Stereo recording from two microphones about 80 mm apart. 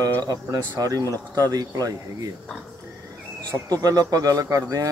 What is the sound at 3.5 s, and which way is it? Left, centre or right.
Speech, right.